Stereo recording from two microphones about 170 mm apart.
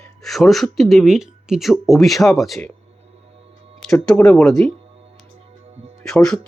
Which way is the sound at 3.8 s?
5° left (ahead or behind).